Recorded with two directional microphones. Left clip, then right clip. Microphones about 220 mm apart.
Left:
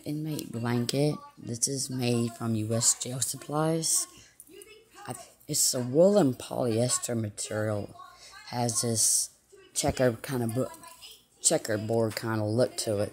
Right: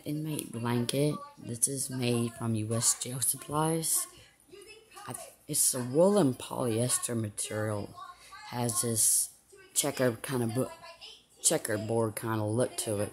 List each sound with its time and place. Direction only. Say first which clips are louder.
0.0 s speech: left 1 dB; 5° left (ahead or behind)